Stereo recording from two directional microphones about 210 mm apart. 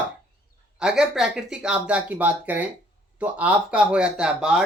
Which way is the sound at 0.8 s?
5° right (ahead or behind).